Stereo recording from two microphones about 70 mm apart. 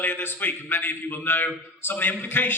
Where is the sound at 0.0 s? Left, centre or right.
Left.